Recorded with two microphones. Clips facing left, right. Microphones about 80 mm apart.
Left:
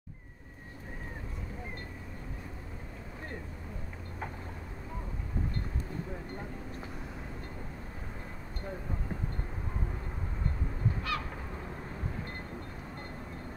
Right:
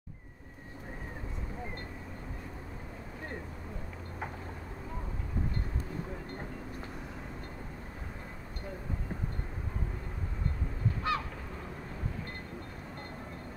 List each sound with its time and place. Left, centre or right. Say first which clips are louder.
11.1 s honk: right 5 dB; right